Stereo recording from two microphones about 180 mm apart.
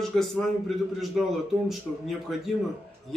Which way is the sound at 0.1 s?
Centre (ahead or behind).